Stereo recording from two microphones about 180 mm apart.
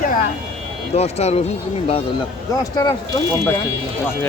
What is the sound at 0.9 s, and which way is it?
Speech, 35° left (ahead or behind).